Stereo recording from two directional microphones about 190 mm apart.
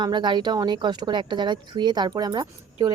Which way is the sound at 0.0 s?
25° right (ahead or behind).